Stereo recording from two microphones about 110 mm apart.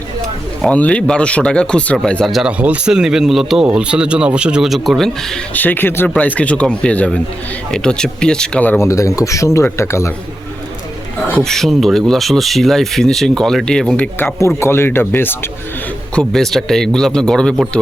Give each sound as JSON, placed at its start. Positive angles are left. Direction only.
{"t": 0.7, "sound": "speech", "side_deg": 10}
{"t": 2.3, "sound": "speech", "side_deg": -10}
{"t": 5.5, "sound": "speech", "side_deg": 15}
{"t": 8.8, "sound": "speech", "side_deg": 30}
{"t": 11.3, "sound": "speech", "side_deg": 5}
{"t": 16.1, "sound": "speech", "side_deg": 5}